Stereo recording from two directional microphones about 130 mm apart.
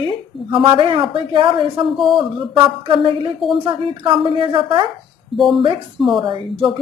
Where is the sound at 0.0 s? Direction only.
40° right (ahead or behind).